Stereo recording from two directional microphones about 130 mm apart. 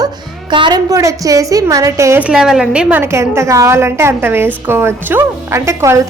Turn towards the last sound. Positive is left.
turn(degrees=-20)  # may be behind; listen again after turning